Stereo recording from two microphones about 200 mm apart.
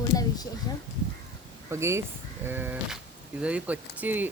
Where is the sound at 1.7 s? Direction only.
15° right (ahead or behind).